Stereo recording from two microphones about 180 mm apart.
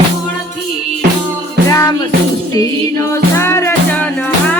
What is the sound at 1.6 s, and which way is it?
Music, 15° left (ahead or behind).